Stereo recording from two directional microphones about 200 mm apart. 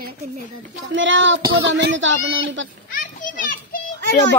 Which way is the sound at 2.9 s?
40° left (ahead or behind).